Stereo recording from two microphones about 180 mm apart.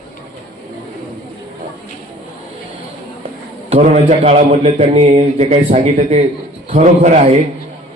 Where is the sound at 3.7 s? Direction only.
35° right (ahead or behind).